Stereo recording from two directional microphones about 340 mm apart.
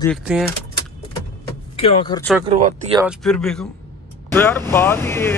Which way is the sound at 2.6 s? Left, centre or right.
Centre.